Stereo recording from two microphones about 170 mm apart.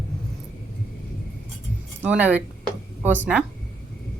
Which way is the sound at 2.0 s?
10° right (ahead or behind).